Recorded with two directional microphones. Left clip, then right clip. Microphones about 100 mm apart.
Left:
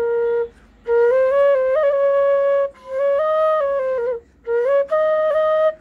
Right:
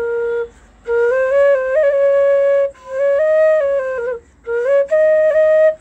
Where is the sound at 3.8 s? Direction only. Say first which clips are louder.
Right 1 dB; 30° left (ahead or behind).